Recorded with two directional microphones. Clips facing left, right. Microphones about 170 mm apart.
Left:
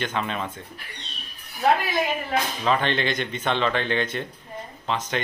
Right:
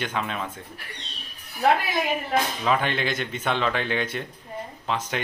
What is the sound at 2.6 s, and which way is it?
Speech, 5° right (ahead or behind).